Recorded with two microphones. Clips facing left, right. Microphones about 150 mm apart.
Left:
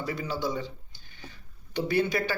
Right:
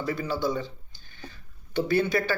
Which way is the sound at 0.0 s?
15° left (ahead or behind).